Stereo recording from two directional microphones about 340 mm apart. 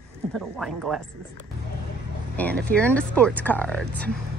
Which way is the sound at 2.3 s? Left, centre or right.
Centre.